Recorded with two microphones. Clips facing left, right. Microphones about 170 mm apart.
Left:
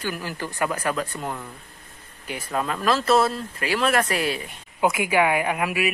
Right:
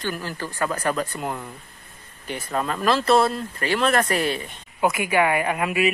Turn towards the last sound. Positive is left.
turn(degrees=5)  # may be behind; listen again after turning